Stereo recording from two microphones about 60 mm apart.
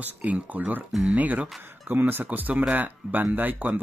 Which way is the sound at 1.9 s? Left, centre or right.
Right.